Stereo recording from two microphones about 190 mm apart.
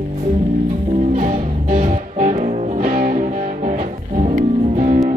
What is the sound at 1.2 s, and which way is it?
Music, 45° right (ahead or behind).